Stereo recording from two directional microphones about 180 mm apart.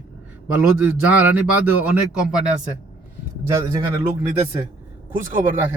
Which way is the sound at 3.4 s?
15° right (ahead or behind).